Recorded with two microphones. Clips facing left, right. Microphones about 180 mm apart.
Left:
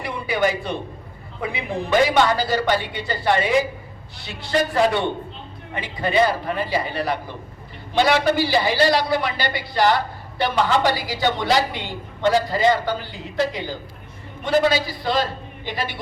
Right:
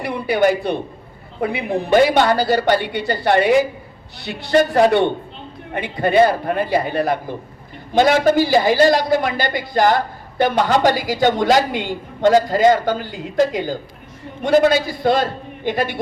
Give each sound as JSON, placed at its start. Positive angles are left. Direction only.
{"t": 0.4, "sound": "a woman's voice", "side_deg": -65}